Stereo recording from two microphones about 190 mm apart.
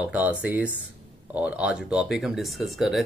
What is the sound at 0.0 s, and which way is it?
Speech, 10° right (ahead or behind).